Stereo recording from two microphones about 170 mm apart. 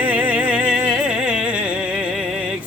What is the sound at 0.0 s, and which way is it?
Music, 10° right (ahead or behind).